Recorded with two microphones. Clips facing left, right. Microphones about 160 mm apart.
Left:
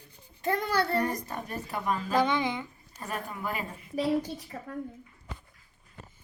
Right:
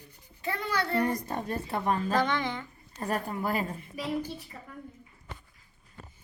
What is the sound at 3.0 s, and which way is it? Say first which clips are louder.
Speech: right 5 dB; 35° right (ahead or behind).